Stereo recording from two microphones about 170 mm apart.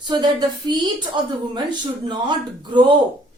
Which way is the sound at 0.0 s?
25° right (ahead or behind).